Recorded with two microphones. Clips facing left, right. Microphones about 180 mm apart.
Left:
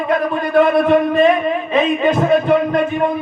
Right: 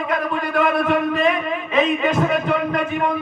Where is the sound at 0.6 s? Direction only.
25° left (ahead or behind).